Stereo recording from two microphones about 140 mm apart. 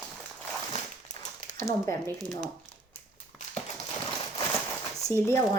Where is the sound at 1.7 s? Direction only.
20° left (ahead or behind).